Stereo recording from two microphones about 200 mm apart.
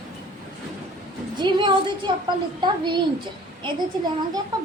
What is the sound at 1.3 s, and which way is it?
A child's voice, 25° right (ahead or behind).